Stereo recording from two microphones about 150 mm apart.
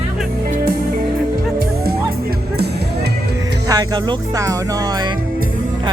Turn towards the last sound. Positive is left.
turn(degrees=-25)  # may be behind; listen again after turning